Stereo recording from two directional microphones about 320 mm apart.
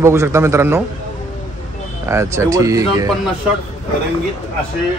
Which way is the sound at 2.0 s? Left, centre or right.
Centre.